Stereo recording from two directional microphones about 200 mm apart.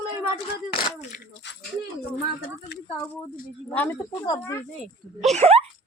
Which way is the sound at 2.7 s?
55° left (ahead or behind).